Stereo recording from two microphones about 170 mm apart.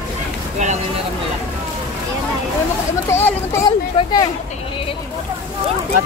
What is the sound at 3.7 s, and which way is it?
Speech, 25° left (ahead or behind).